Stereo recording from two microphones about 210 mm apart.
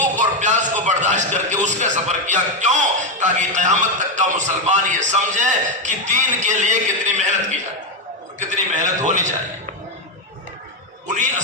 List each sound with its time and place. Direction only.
0.0 s a man's voice: 35° right (ahead or behind)
11.1 s a man's voice: 35° right (ahead or behind)